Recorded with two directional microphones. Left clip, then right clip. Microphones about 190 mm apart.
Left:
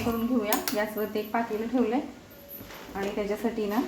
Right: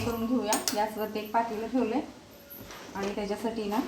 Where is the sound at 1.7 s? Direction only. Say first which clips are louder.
Left 2 dB; 40° left (ahead or behind).